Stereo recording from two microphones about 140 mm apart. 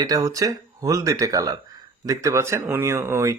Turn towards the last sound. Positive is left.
turn(degrees=-20)  # may be behind; listen again after turning